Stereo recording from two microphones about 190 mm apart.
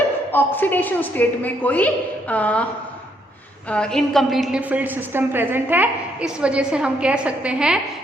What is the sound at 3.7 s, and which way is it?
A woman's voice, 5° left (ahead or behind).